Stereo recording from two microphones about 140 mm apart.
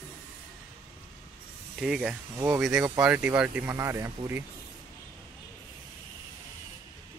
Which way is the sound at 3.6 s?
20° right (ahead or behind).